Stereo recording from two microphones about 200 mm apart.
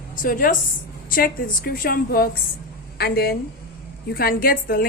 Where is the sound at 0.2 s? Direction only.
45° left (ahead or behind).